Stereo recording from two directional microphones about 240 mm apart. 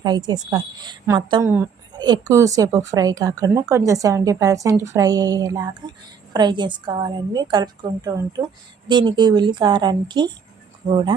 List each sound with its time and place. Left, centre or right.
0.0 s a woman's voice: centre